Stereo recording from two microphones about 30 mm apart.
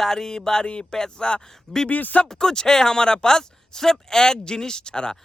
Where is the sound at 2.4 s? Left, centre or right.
Centre.